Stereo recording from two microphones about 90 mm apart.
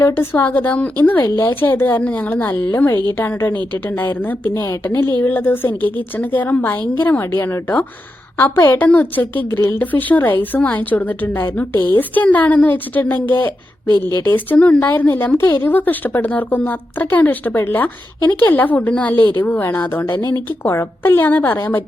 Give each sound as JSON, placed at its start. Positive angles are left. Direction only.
{"t": 0.0, "sound": "speech", "side_deg": 25}
{"t": 4.5, "sound": "a woman's voice", "side_deg": 35}